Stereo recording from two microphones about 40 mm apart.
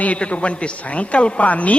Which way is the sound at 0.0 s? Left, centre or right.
Left.